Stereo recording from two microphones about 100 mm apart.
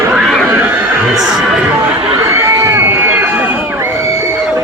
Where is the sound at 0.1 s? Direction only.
Centre (ahead or behind).